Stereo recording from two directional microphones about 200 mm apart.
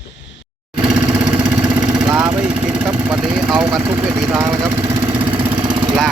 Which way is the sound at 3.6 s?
15° right (ahead or behind).